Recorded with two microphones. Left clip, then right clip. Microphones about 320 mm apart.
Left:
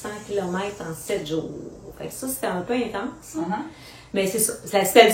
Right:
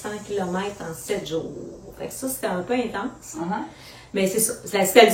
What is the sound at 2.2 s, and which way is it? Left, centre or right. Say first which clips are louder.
Speech: even; centre.